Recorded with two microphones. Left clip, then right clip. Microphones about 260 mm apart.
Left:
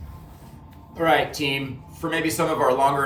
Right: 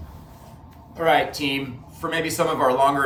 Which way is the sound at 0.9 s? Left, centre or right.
Centre.